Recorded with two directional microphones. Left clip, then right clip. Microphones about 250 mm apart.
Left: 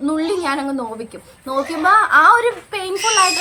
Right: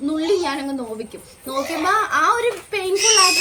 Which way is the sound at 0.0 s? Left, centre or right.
Centre.